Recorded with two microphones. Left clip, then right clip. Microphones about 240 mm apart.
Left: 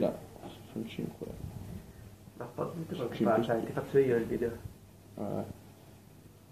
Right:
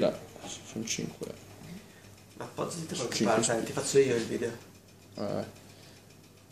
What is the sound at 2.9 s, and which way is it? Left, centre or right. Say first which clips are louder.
Speech: right 1 dB; right.